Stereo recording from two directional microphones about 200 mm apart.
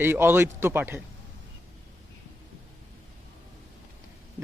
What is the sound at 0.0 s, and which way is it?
A man's voice, 10° right (ahead or behind).